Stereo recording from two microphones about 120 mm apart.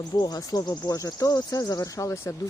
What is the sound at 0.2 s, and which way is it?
Speech, 30° left (ahead or behind).